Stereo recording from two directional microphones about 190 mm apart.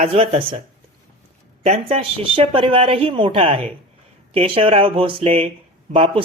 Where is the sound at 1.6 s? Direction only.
30° right (ahead or behind).